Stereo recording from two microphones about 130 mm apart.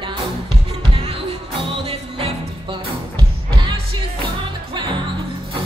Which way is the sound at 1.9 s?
50° right (ahead or behind).